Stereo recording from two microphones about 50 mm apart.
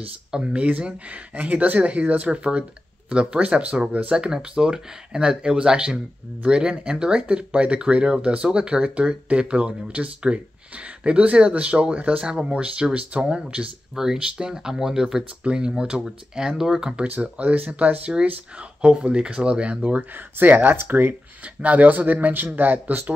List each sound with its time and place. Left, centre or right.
0.3 s speech: centre
16.9 s speech: right
20.0 s speech: right